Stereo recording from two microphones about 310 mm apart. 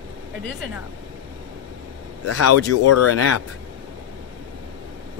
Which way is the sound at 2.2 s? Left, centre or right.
Left.